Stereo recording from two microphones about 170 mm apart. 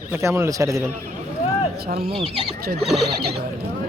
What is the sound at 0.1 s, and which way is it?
Speech, 15° right (ahead or behind).